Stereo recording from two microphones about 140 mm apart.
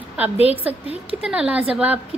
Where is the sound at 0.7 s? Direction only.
10° right (ahead or behind).